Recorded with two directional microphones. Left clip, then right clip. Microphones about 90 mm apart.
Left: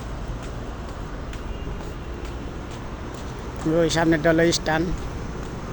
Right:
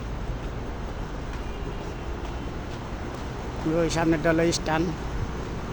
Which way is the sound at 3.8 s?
35° left (ahead or behind).